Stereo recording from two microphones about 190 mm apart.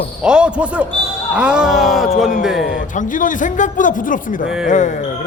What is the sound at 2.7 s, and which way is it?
A man's voice, 45° left (ahead or behind).